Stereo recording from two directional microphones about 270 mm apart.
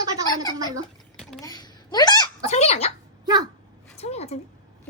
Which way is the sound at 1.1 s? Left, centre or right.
Centre.